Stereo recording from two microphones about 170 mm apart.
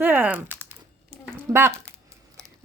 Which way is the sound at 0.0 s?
10° right (ahead or behind).